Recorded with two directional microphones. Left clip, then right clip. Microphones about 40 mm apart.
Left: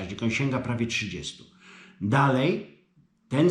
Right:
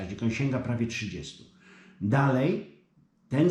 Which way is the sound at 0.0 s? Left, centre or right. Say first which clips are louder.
Left 3 dB; centre.